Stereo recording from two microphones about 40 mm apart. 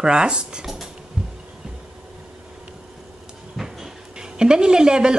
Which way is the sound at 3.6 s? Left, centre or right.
Centre.